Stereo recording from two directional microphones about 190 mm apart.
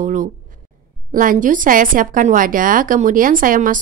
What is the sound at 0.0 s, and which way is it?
A woman's voice, 45° right (ahead or behind).